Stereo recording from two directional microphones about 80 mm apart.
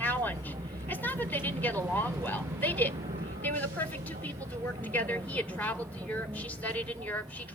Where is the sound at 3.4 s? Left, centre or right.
Left.